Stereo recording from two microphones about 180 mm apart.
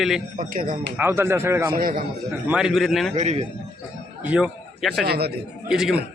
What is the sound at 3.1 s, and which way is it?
Speech, 40° right (ahead or behind).